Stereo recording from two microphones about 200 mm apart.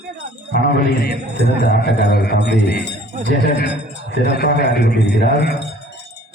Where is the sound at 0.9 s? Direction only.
55° left (ahead or behind).